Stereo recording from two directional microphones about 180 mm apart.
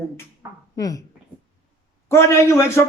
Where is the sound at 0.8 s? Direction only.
20° left (ahead or behind).